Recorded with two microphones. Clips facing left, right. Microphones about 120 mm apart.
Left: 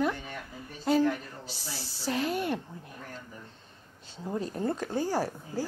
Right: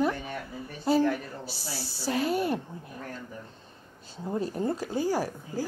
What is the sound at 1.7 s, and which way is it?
Speech, 45° left (ahead or behind).